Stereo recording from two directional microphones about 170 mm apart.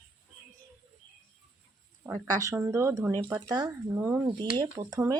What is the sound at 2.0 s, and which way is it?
Speech, 20° right (ahead or behind).